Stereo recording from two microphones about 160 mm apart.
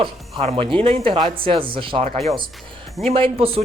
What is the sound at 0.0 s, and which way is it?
Speech, 35° right (ahead or behind).